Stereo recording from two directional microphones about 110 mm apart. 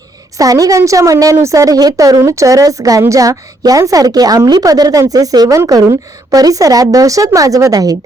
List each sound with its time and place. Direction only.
0.3 s a woman's voice: 35° right (ahead or behind)